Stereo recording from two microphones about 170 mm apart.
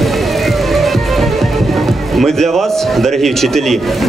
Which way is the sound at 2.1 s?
Centre (ahead or behind).